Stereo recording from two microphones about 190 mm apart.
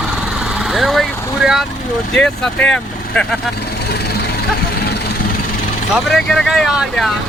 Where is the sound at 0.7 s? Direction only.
Centre (ahead or behind).